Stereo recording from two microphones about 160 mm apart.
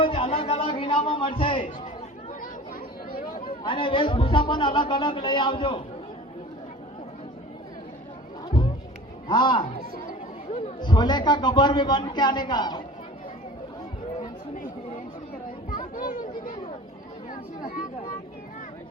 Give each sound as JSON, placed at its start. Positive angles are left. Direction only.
{"t": 0.0, "sound": "speech", "side_deg": 35}
{"t": 3.2, "sound": "chatter", "side_deg": 60}
{"t": 3.4, "sound": "a man's voice", "side_deg": 30}
{"t": 9.2, "sound": "a man's voice", "side_deg": 30}
{"t": 14.2, "sound": "chatter", "side_deg": 55}
{"t": 16.0, "sound": "speech", "side_deg": 60}